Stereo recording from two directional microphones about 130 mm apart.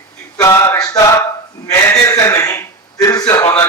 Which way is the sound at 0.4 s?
20° left (ahead or behind).